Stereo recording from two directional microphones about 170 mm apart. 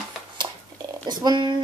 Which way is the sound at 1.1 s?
25° right (ahead or behind).